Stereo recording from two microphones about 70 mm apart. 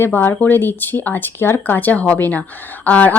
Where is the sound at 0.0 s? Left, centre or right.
Left.